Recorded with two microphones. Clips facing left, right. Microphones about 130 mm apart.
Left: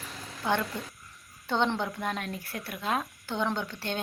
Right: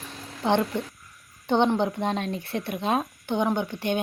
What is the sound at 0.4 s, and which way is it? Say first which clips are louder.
Speech: right 6 dB; 20° right (ahead or behind).